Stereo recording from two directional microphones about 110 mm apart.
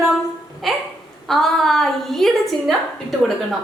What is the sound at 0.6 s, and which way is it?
A woman's voice, centre (ahead or behind).